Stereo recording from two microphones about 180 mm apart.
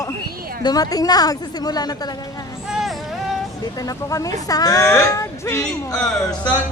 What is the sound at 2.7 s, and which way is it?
Vehicle, centre (ahead or behind).